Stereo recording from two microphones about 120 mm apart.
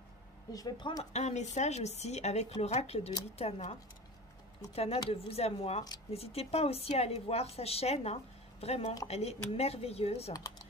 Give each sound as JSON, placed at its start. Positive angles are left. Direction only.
{"t": 0.5, "sound": "speech", "side_deg": 30}
{"t": 1.1, "sound": "a woman's voice", "side_deg": 70}
{"t": 4.7, "sound": "a woman's voice", "side_deg": 55}